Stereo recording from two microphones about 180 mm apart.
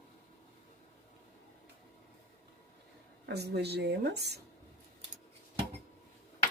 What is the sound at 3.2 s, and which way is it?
Speech, 65° right (ahead or behind).